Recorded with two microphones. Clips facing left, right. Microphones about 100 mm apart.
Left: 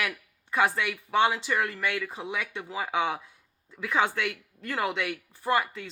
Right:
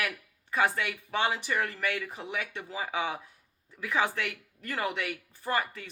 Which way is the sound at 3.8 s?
20° left (ahead or behind).